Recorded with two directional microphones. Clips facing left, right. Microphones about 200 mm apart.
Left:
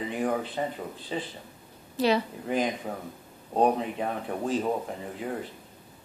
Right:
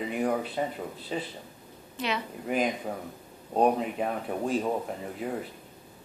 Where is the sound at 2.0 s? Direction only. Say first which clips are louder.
Left 8 dB; 35° left (ahead or behind).